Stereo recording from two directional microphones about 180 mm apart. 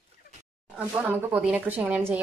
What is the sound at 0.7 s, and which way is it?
A woman's voice, 10° right (ahead or behind).